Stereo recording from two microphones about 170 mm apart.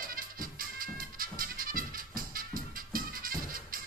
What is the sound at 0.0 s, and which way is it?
Music, 55° right (ahead or behind).